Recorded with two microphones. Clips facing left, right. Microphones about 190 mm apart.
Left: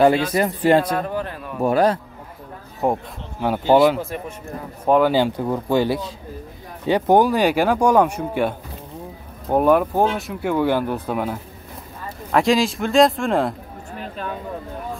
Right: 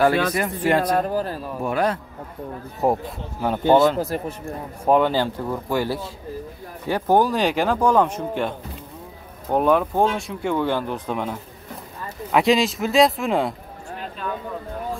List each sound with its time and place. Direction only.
0.3 s speech: 30° left (ahead or behind)
0.9 s speech: 35° right (ahead or behind)
1.6 s speech: 35° left (ahead or behind)
2.8 s a man's voice: centre (ahead or behind)
4.0 s speech: 40° right (ahead or behind)
4.8 s a man's voice: centre (ahead or behind)
5.1 s a man's voice: 15° left (ahead or behind); by 13.6 s centre (ahead or behind)